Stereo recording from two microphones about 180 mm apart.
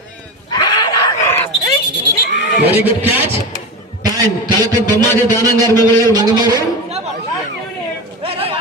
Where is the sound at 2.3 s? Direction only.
70° left (ahead or behind).